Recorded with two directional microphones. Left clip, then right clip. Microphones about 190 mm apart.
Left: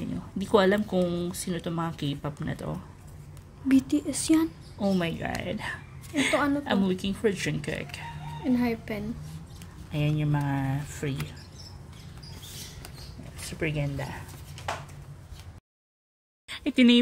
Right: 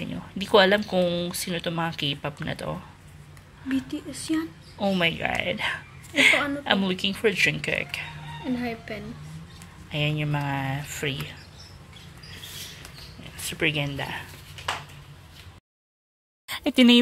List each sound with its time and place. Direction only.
0.0 s speech: 5° left (ahead or behind)
3.6 s speech: 90° left
4.7 s a woman's voice: centre (ahead or behind)
8.5 s speech: 75° left (ahead or behind)
9.8 s speech: 5° left (ahead or behind)
13.5 s speech: centre (ahead or behind)
16.4 s speech: 35° right (ahead or behind)